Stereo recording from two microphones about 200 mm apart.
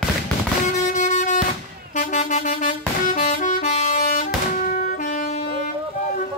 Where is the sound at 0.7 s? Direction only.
35° left (ahead or behind).